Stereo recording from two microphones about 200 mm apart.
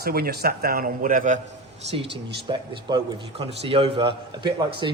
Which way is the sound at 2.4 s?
25° right (ahead or behind).